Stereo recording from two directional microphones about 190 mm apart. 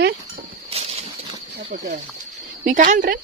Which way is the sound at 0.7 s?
30° right (ahead or behind).